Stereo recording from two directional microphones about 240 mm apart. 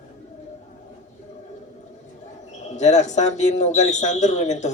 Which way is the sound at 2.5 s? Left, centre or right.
Left.